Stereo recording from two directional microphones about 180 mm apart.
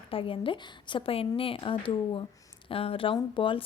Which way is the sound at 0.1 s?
30° left (ahead or behind).